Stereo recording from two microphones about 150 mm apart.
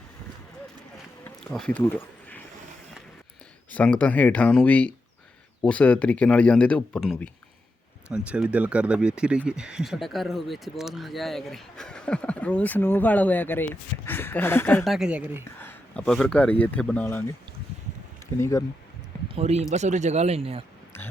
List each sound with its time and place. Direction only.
1.5 s speech: 5° left (ahead or behind)
3.7 s speech: 10° left (ahead or behind)
8.1 s speech: 10° right (ahead or behind); by 14.8 s 15° left (ahead or behind)
14.8 s speech: 5° right (ahead or behind)
15.5 s a sound: 15° left (ahead or behind)
16.0 s speech: 5° left (ahead or behind)
18.3 s speech: 20° left (ahead or behind)
19.4 s speech: 45° right (ahead or behind)